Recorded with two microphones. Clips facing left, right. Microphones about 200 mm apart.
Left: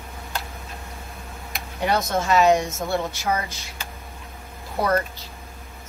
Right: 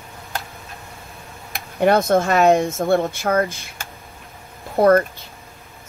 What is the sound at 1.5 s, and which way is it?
Speech, 55° right (ahead or behind).